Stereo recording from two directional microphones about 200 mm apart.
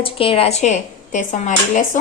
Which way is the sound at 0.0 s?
25° left (ahead or behind).